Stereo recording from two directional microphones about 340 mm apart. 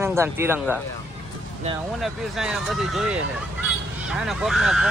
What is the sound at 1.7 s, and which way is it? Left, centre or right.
Speech, centre.